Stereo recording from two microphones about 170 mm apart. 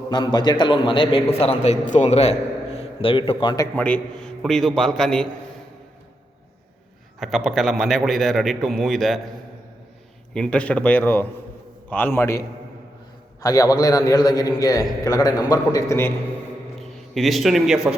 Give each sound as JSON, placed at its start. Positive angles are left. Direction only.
{"t": 0.1, "sound": "a man's voice", "side_deg": 25}
{"t": 3.8, "sound": "a man's voice", "side_deg": 10}
{"t": 7.2, "sound": "a man's voice", "side_deg": 0}
{"t": 10.3, "sound": "a man's voice", "side_deg": 5}
{"t": 13.4, "sound": "a man's voice", "side_deg": 20}
{"t": 16.8, "sound": "a man's voice", "side_deg": 0}